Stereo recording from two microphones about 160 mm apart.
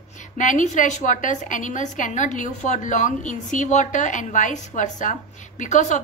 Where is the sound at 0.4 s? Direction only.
50° left (ahead or behind).